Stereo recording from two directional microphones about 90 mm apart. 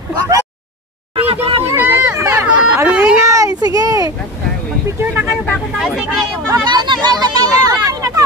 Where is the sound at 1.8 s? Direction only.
25° right (ahead or behind).